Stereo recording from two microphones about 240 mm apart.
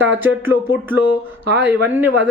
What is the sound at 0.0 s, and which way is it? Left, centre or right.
Speech, centre.